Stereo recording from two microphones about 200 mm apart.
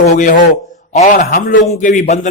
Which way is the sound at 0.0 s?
40° left (ahead or behind).